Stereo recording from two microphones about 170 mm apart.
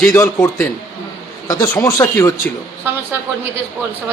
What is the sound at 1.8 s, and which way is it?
Speech, 20° left (ahead or behind).